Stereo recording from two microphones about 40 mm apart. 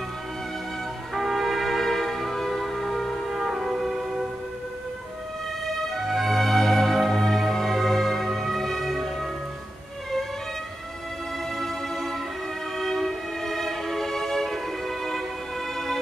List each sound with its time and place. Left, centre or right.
1.1 s music: centre
3.3 s music: centre
5.9 s music: centre
11.5 s music: centre
12.7 s violin: centre
15.7 s music: centre